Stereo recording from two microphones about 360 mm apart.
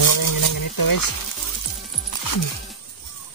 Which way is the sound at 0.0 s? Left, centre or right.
Left.